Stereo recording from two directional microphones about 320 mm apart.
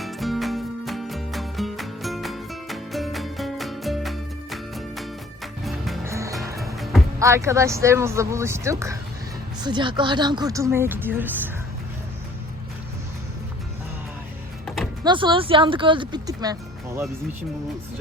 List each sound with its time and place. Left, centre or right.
0.0 s music: centre
9.6 s speech: centre
15.0 s speech: centre